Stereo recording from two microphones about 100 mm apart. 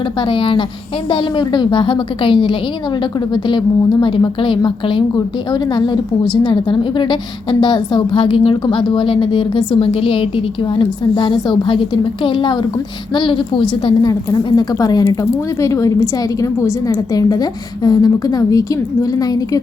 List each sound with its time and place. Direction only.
0.2 s a woman's voice: 60° left (ahead or behind)
14.1 s speech: 40° left (ahead or behind)